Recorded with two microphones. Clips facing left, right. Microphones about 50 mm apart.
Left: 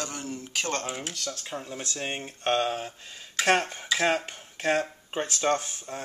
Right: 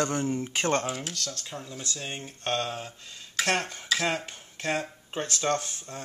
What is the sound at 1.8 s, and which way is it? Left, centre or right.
Speech, left.